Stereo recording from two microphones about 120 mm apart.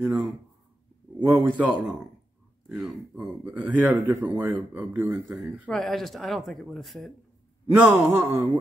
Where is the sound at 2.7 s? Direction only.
10° right (ahead or behind).